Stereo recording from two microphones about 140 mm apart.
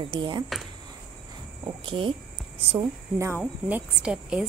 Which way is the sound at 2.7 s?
20° right (ahead or behind).